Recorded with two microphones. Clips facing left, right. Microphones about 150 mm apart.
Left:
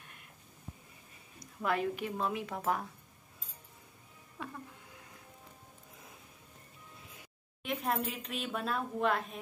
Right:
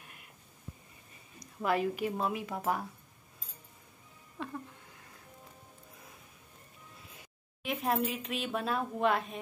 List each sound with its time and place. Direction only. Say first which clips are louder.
1.6 s a woman's voice: right 3 dB; 5° right (ahead or behind)
4.4 s a sound: right 3 dB; 5° left (ahead or behind)
7.6 s a woman's voice: right 3 dB; 5° right (ahead or behind)